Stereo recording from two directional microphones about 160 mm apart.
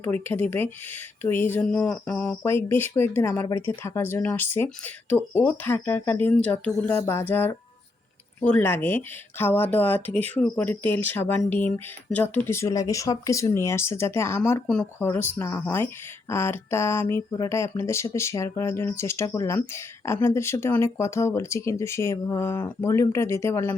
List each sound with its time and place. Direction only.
0.0 s speech: 10° left (ahead or behind)